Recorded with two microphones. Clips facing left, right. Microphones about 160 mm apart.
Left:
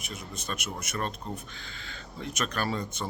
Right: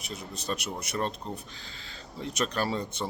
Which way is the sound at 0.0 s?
35° right (ahead or behind).